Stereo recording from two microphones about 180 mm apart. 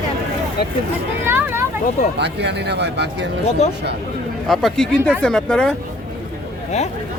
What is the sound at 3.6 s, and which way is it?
Speech, 40° left (ahead or behind).